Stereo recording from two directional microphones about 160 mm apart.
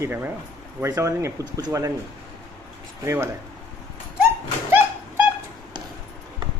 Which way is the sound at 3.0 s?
15° right (ahead or behind).